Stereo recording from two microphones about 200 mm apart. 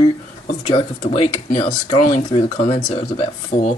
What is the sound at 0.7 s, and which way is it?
Speech, 25° left (ahead or behind).